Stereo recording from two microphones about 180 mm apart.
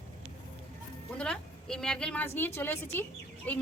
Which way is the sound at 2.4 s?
10° left (ahead or behind).